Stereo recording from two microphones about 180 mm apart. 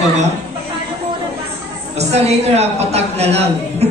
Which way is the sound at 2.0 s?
35° right (ahead or behind).